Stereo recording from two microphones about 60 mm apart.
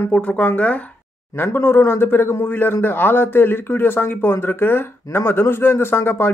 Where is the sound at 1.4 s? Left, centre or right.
Left.